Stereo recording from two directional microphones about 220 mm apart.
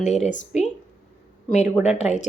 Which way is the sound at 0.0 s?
30° left (ahead or behind).